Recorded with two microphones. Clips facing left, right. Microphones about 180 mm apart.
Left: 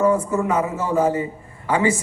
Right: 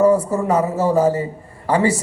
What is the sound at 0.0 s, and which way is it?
A man's voice, 35° right (ahead or behind).